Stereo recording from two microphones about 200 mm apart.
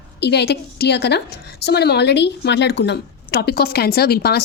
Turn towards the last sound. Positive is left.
turn(degrees=50)  # may be behind; listen again after turning